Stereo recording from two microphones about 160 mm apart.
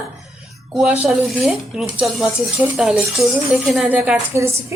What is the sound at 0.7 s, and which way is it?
Speech, 5° right (ahead or behind).